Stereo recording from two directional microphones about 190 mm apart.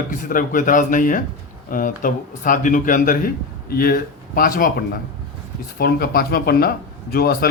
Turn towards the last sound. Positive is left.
turn(degrees=55)  # may be behind; listen again after turning